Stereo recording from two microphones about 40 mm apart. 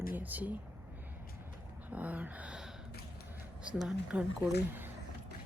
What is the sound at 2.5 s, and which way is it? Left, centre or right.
Gasp, centre.